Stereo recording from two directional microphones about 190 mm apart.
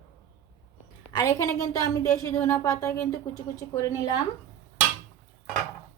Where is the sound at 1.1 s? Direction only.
15° left (ahead or behind).